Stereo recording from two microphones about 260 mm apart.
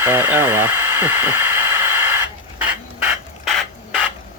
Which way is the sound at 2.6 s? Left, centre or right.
Centre.